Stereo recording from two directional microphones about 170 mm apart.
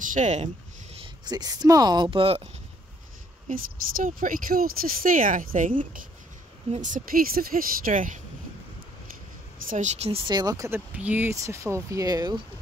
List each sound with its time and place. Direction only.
0.1 s speech: 45° right (ahead or behind)
1.2 s speech: 25° right (ahead or behind)
3.4 s speech: 55° right (ahead or behind)
9.7 s speech: 45° right (ahead or behind); by 12.4 s 20° right (ahead or behind)